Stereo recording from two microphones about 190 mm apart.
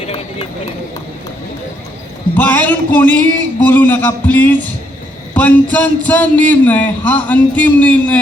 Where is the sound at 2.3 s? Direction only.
10° left (ahead or behind).